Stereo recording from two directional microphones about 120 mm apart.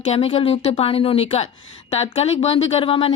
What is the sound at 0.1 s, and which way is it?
Speech, 55° left (ahead or behind).